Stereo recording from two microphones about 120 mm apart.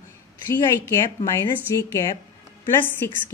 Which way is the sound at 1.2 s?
25° left (ahead or behind).